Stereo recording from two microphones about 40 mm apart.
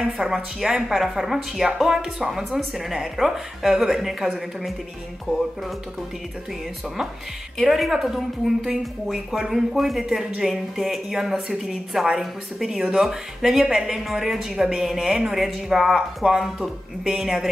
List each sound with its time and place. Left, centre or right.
0.0 s a woman's voice: centre
7.5 s a woman's voice: centre
12.7 s a woman's voice: centre